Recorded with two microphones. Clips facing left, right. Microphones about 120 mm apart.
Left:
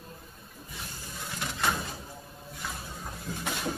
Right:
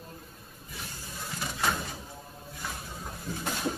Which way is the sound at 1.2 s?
10° right (ahead or behind).